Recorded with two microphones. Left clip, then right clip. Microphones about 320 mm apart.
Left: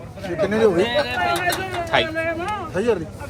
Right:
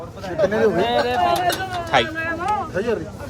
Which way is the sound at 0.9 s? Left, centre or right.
Right.